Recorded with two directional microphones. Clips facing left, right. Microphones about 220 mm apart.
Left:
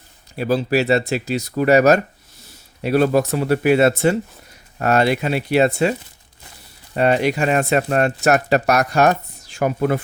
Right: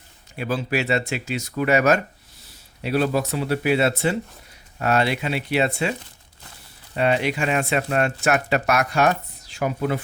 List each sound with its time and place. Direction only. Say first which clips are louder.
0.3 s speech: left 6 dB; 40° left (ahead or behind)
6.9 s speech: left 4 dB; 45° left (ahead or behind)